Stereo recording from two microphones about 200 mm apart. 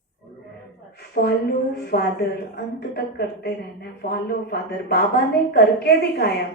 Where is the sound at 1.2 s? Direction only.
55° left (ahead or behind).